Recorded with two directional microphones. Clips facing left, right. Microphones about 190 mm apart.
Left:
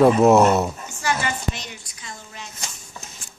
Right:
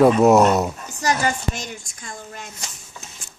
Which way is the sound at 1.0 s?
40° right (ahead or behind).